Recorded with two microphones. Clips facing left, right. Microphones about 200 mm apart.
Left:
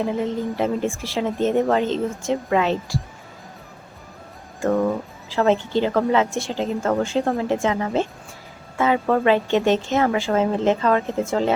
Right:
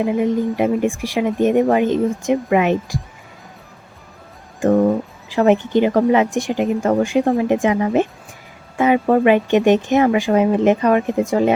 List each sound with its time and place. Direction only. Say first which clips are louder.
0.2 s speech: right 5 dB; 15° right (ahead or behind)
4.6 s speech: right 5 dB; 20° right (ahead or behind)